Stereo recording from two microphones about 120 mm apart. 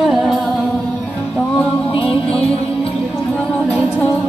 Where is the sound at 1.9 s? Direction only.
50° left (ahead or behind).